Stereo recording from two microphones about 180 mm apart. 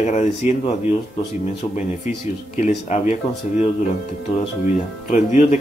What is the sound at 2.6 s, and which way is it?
Speech, 40° left (ahead or behind).